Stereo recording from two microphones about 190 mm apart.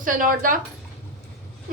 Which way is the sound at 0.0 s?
45° right (ahead or behind).